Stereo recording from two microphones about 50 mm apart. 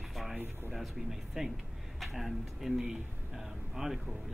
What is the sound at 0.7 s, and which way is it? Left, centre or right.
Speech, centre.